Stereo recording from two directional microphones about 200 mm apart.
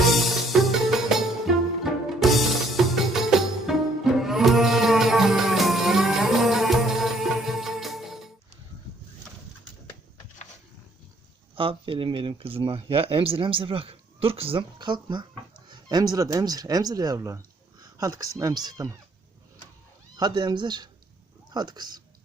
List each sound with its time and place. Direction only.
0.0 s music: centre (ahead or behind)
11.5 s speech: 25° right (ahead or behind)
20.1 s speech: 20° right (ahead or behind)